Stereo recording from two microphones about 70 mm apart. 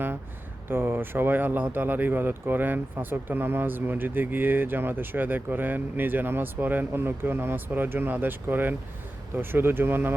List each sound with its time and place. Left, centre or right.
0.7 s speech: right